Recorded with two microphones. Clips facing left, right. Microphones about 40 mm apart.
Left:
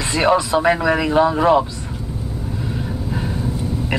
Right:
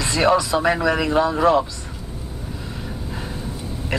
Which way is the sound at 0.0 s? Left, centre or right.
Centre.